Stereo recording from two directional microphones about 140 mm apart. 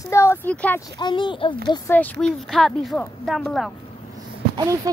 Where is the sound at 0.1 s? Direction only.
20° left (ahead or behind).